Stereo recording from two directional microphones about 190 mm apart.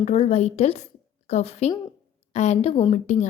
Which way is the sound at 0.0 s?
35° left (ahead or behind).